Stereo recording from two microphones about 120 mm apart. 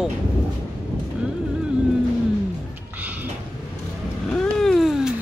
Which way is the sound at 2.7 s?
15° right (ahead or behind).